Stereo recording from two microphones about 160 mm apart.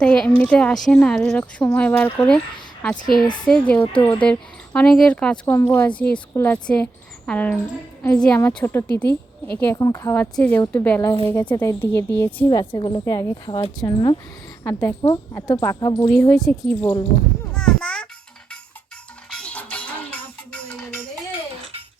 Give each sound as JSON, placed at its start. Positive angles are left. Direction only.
{"t": 0.0, "sound": "speech", "side_deg": 5}
{"t": 3.4, "sound": "a woman's voice", "side_deg": 5}
{"t": 12.5, "sound": "a woman's voice", "side_deg": 25}
{"t": 16.5, "sound": "speech", "side_deg": 10}
{"t": 17.5, "sound": "a sound", "side_deg": 5}
{"t": 19.3, "sound": "music", "side_deg": 5}